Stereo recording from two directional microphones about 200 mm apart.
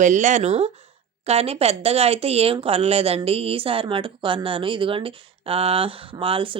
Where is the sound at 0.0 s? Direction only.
40° right (ahead or behind).